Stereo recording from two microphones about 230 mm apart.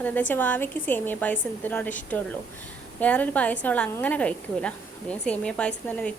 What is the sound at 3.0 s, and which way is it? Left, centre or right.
A woman's voice, centre.